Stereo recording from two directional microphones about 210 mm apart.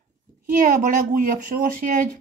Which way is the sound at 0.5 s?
40° right (ahead or behind).